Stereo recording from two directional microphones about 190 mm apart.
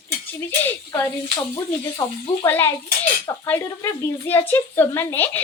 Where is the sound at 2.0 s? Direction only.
20° left (ahead or behind).